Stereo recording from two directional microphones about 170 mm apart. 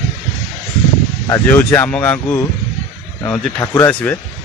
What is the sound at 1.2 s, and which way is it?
Speech, 15° left (ahead or behind).